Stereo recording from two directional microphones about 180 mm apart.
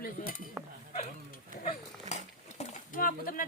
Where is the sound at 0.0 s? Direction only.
55° left (ahead or behind).